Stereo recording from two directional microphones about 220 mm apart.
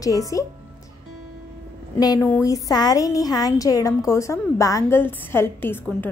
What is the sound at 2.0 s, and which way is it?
A woman's voice, 15° left (ahead or behind).